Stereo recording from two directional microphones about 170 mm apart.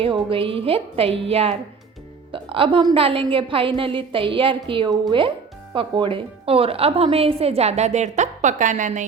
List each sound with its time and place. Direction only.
0.0 s a woman's voice: 30° right (ahead or behind)